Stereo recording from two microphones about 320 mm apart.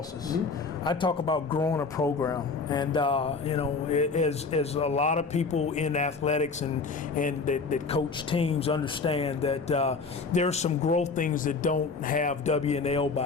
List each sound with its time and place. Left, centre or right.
0.9 s speech: centre